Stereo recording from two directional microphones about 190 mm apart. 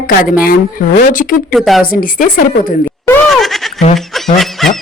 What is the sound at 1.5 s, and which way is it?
Speech, centre (ahead or behind).